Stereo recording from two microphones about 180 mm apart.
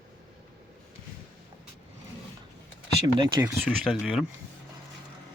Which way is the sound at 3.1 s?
20° right (ahead or behind).